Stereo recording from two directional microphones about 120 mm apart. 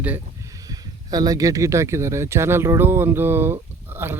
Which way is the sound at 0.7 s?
30° right (ahead or behind).